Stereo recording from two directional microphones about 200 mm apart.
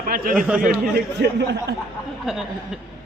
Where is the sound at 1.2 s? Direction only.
55° right (ahead or behind).